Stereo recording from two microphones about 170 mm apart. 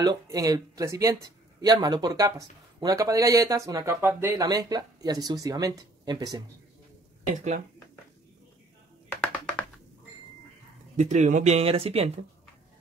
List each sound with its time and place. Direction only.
0.0 s speech: 20° right (ahead or behind)
9.1 s music: 10° left (ahead or behind)
11.0 s speech: 45° right (ahead or behind)